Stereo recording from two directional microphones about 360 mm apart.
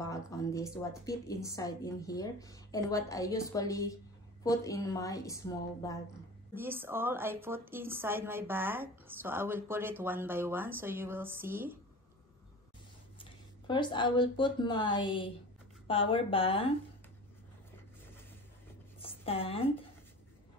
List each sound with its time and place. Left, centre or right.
0.0 s a woman's voice: centre
6.5 s a woman's voice: centre
13.2 s a woman's voice: centre
18.9 s a sound: centre